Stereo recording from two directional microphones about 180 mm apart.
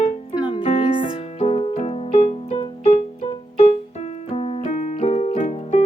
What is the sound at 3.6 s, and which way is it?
Keyboard, 35° left (ahead or behind).